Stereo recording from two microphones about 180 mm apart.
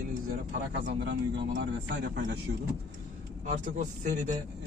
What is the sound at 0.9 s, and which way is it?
A man's voice, 75° right (ahead or behind).